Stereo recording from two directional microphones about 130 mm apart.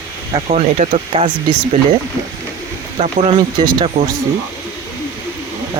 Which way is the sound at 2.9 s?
55° right (ahead or behind).